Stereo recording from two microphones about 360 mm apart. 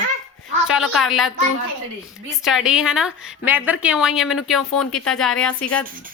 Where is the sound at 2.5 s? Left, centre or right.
Centre.